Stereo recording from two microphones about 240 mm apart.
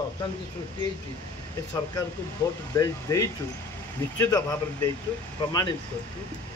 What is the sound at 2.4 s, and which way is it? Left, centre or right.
Speech, centre.